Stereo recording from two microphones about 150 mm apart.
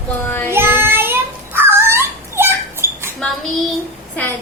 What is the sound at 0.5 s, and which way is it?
Child singing, 15° right (ahead or behind).